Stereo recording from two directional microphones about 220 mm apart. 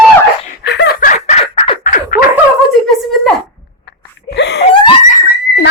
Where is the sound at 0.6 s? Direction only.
50° left (ahead or behind).